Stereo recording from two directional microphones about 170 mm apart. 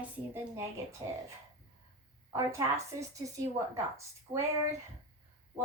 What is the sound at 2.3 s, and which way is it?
A woman's voice, 15° right (ahead or behind).